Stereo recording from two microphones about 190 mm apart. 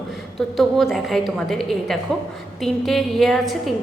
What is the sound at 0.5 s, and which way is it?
A woman's voice, centre (ahead or behind).